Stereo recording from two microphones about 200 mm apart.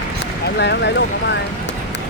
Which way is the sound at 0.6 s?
60° left (ahead or behind).